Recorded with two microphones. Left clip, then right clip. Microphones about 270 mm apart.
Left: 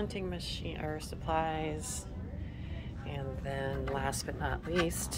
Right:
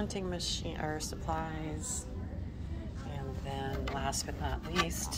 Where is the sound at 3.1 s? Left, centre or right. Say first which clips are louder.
Left 3 dB; centre.